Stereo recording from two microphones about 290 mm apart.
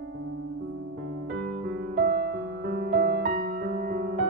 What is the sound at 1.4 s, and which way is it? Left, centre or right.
Music, right.